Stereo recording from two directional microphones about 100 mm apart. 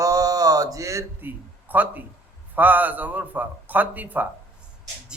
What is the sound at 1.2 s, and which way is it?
A man's voice, 15° right (ahead or behind).